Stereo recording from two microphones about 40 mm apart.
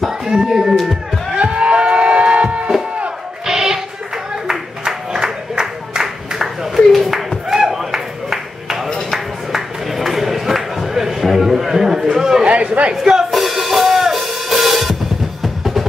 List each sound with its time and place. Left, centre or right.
0.3 s speech: centre
1.3 s music: right
3.4 s a sound: centre
12.4 s chatter: right
13.0 s music: centre